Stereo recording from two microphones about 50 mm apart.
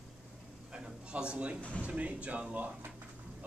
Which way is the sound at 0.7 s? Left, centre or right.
Centre.